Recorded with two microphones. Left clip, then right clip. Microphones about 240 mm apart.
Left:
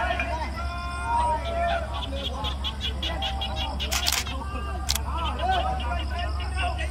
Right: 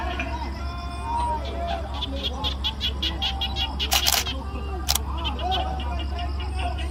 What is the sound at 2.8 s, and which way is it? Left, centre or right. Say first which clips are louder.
Music: right 2 dB; right.